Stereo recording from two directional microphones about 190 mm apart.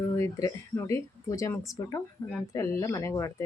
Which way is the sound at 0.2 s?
15° left (ahead or behind).